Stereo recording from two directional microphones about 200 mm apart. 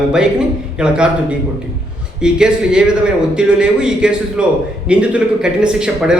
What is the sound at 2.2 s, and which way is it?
A man's voice, 5° right (ahead or behind).